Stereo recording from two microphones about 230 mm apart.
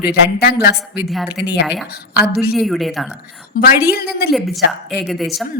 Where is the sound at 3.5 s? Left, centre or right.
Left.